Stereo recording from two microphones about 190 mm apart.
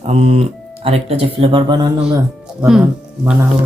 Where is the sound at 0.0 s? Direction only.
35° right (ahead or behind).